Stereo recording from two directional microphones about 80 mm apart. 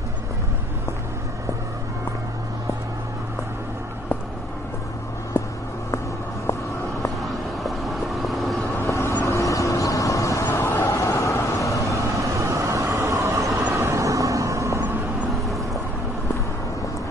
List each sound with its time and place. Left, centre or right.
5.4 s a sound: left
7.2 s vehicle: centre
8.8 s vehicle: left
10.7 s vehicle: left
11.1 s vehicle: left
12.0 s vehicle: right
15.4 s vehicle: centre